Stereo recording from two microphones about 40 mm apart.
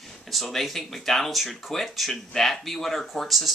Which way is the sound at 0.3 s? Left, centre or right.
Centre.